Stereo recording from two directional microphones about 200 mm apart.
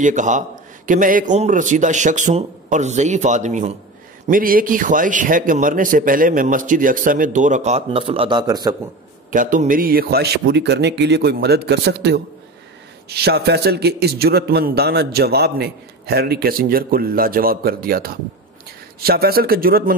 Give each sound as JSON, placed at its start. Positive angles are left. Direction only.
{"t": 0.0, "sound": "a man's voice", "side_deg": -40}
{"t": 9.3, "sound": "a man's voice", "side_deg": -40}